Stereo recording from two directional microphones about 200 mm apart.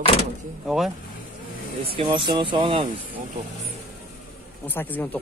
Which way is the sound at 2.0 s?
25° right (ahead or behind).